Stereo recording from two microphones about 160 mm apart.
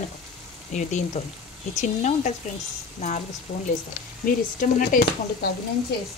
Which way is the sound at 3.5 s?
60° left (ahead or behind).